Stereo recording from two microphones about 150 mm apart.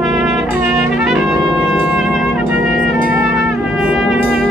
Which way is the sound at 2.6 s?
70° left (ahead or behind).